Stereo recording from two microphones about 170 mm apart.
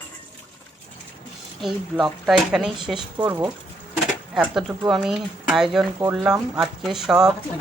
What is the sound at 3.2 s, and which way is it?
Speech, 15° right (ahead or behind).